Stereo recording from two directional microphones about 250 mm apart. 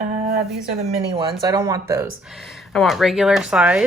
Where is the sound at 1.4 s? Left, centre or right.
Centre.